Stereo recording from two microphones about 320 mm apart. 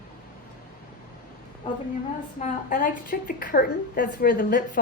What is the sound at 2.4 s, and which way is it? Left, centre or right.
A woman's voice, left.